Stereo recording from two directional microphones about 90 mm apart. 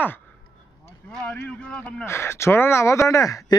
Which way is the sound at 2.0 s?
30° left (ahead or behind).